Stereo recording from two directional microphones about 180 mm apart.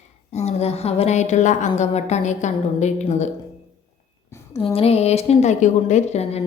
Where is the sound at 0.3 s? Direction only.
35° left (ahead or behind).